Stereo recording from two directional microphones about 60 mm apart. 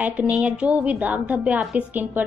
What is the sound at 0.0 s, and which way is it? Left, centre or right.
A woman's voice, right.